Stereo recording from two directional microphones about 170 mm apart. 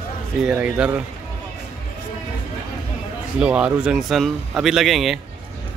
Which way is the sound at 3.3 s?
5° right (ahead or behind).